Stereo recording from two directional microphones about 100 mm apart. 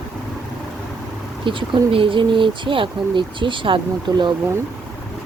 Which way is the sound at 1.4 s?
55° right (ahead or behind).